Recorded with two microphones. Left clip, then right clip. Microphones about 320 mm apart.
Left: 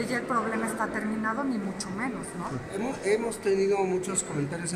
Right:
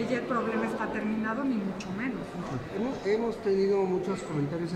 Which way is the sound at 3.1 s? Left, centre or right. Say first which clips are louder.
Left 2 dB; left.